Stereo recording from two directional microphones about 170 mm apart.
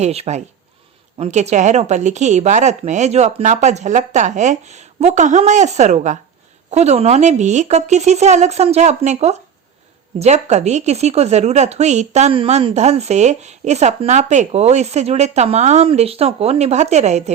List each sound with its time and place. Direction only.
0.0 s speech: 40° right (ahead or behind)